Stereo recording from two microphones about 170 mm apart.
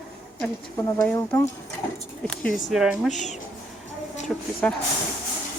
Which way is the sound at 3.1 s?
45° left (ahead or behind).